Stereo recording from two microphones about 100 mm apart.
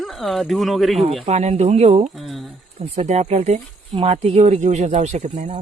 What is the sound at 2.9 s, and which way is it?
Speech, 90° right.